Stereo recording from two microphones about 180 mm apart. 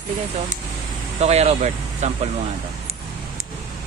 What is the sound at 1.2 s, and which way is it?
Speech, 35° right (ahead or behind).